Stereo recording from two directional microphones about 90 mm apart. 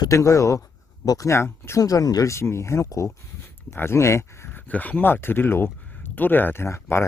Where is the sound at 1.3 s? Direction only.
30° left (ahead or behind).